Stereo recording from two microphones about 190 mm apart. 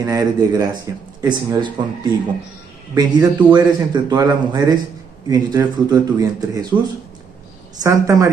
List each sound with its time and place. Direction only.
0.0 s a man's voice: 20° right (ahead or behind)
7.8 s a woman's voice: 15° right (ahead or behind)